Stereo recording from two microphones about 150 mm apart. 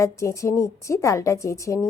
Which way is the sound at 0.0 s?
20° left (ahead or behind).